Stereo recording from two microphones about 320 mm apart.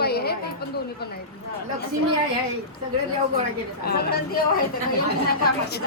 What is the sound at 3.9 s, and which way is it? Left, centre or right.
Speech, left.